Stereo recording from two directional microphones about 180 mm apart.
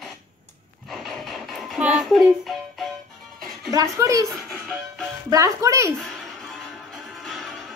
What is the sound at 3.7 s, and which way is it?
Speech, 20° right (ahead or behind).